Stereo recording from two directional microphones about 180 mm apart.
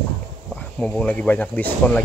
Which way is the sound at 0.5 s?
5° left (ahead or behind).